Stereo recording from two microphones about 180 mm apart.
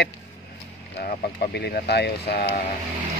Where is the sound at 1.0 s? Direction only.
60° left (ahead or behind).